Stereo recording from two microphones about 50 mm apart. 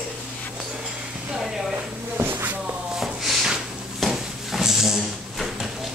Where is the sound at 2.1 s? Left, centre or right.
Right.